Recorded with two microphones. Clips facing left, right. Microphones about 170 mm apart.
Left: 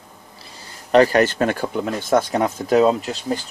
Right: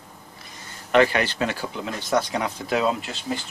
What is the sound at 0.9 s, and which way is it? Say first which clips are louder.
Speech: left 5 dB; 40° left (ahead or behind).